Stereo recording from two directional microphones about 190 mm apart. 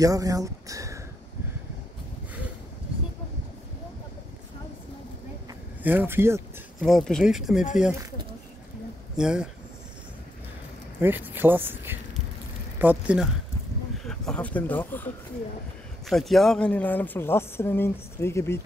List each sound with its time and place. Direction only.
0.0 s speech: 20° right (ahead or behind)
5.9 s speech: 10° right (ahead or behind)
6.8 s speech: 5° left (ahead or behind)
9.1 s speech: 5° right (ahead or behind)
11.0 s speech: 10° right (ahead or behind); by 15.0 s 10° left (ahead or behind)
16.1 s speech: centre (ahead or behind)